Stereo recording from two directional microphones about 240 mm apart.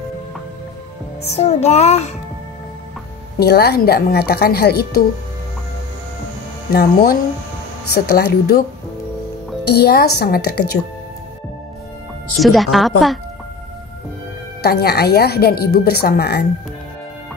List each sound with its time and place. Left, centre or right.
1.2 s music: left
3.3 s speech: left
6.7 s speech: left
9.7 s speech: left
12.4 s speech: centre
14.6 s speech: left